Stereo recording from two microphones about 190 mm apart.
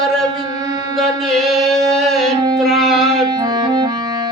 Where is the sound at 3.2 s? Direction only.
20° right (ahead or behind).